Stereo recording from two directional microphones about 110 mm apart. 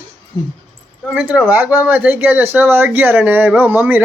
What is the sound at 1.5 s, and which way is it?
Speech, 15° right (ahead or behind).